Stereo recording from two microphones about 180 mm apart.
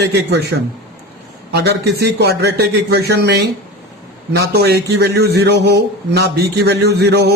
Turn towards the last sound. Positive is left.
turn(degrees=-65)  # may be behind; listen again after turning